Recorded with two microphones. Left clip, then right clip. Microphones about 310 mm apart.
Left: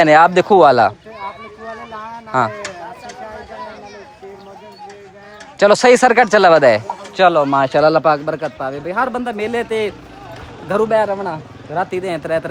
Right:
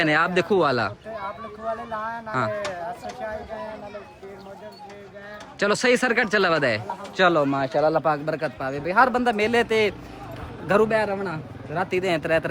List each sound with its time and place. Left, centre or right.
0.0 s speech: centre
5.5 s speech: centre
7.7 s speech: left
8.2 s speech: centre